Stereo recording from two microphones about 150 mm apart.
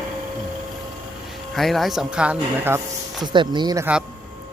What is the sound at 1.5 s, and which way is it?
A man's voice, centre (ahead or behind).